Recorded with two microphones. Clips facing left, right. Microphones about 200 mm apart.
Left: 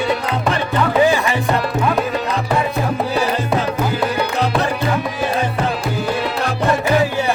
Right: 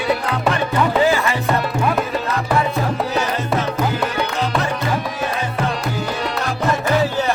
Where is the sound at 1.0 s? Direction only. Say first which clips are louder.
Left 3 dB; 15° left (ahead or behind).